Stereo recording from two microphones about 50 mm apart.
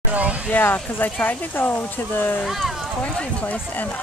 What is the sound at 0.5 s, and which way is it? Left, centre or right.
Speech, left.